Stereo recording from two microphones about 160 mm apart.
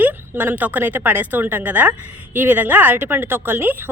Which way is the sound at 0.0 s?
10° right (ahead or behind).